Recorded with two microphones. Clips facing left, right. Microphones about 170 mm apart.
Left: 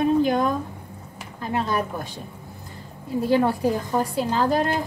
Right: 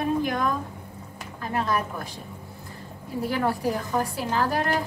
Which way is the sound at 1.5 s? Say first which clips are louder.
Left 2 dB; 25° left (ahead or behind).